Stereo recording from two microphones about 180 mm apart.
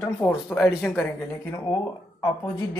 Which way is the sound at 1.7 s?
20° left (ahead or behind).